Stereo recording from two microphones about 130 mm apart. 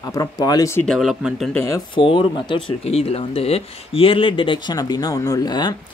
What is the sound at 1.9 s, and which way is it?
Speech, 40° left (ahead or behind).